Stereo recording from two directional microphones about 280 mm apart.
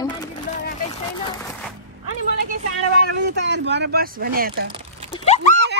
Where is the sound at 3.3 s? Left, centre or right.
Right.